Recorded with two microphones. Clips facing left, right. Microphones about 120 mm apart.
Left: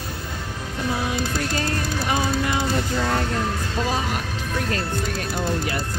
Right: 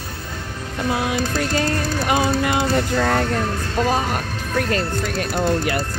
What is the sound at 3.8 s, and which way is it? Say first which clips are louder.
Speech: right 5 dB; 50° right (ahead or behind).